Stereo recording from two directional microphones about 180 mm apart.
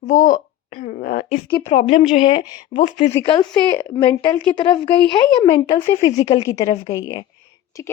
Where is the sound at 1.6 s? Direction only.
35° left (ahead or behind).